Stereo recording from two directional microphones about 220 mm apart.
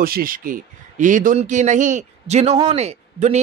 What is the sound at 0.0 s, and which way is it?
A man's voice, 40° right (ahead or behind).